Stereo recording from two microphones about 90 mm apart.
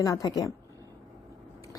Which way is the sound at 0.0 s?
40° left (ahead or behind).